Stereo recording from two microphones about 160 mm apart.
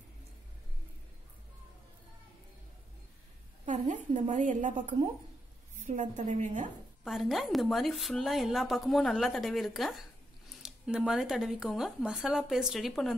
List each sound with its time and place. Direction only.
3.6 s a woman's voice: 50° right (ahead or behind)
7.1 s speech: centre (ahead or behind)